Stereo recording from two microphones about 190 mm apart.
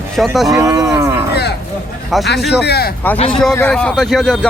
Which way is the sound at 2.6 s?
55° left (ahead or behind).